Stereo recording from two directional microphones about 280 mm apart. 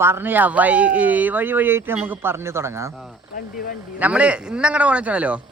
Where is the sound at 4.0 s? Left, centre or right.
Centre.